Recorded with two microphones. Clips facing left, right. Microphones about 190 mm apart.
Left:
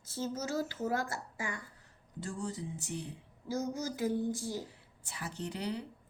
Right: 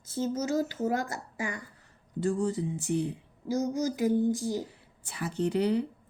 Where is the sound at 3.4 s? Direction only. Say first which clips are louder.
Right 7 dB; 15° right (ahead or behind).